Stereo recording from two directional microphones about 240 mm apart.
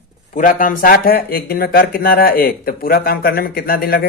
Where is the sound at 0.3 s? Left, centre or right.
Left.